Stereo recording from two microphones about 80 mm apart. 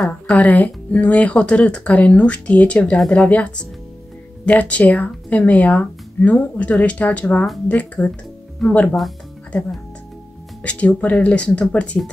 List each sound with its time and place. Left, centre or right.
0.0 s speech: centre
10.6 s speech: centre